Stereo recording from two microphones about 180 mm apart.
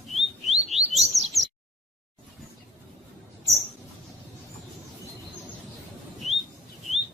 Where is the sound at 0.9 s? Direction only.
40° right (ahead or behind).